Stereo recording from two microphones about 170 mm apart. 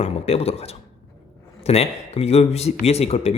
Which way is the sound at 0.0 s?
40° left (ahead or behind).